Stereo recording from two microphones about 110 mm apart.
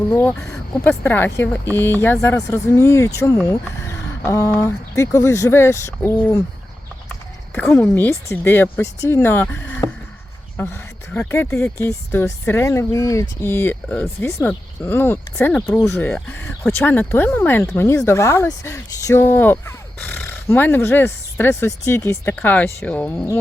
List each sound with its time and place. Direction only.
0.1 s speech: 20° left (ahead or behind)
7.8 s speech: 20° left (ahead or behind)
10.6 s a sound: 20° left (ahead or behind)
11.3 s speech: 20° left (ahead or behind)